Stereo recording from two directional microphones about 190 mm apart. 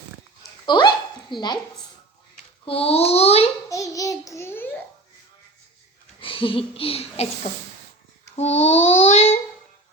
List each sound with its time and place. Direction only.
0.6 s dog: 25° left (ahead or behind)
2.6 s child singing: 30° left (ahead or behind)
3.7 s a child's voice: 15° left (ahead or behind)
6.1 s a child's voice: 30° left (ahead or behind)
7.5 s speech: 45° left (ahead or behind)
8.4 s child singing: 35° left (ahead or behind)